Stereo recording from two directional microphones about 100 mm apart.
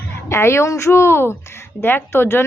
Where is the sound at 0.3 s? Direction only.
25° left (ahead or behind).